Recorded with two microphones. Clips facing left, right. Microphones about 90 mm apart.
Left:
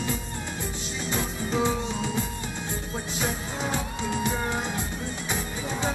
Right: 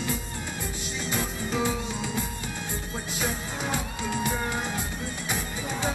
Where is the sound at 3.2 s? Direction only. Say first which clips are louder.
Left 1 dB; 20° left (ahead or behind).